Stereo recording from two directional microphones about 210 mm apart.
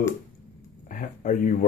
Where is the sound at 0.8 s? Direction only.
40° left (ahead or behind).